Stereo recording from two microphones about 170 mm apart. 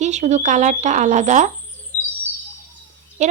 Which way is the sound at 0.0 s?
45° right (ahead or behind).